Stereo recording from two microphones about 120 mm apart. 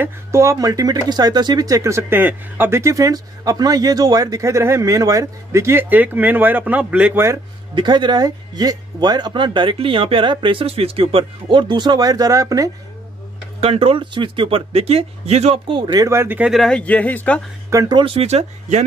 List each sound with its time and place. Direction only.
0.0 s speech: 25° right (ahead or behind)
7.7 s speech: 40° right (ahead or behind)
13.6 s speech: 55° right (ahead or behind)
15.6 s speech: 40° right (ahead or behind)
16.1 s speech: 20° right (ahead or behind)
16.4 s speech: centre (ahead or behind)
17.6 s speech: 25° right (ahead or behind)
17.9 s speech: 50° right (ahead or behind); by 18.9 s 70° right (ahead or behind)